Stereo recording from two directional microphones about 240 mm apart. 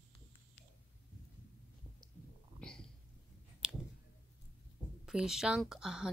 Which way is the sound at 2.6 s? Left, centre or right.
Centre.